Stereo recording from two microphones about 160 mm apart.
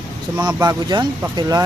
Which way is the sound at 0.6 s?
25° right (ahead or behind).